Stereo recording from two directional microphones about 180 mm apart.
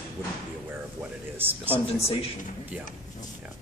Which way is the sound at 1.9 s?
35° left (ahead or behind).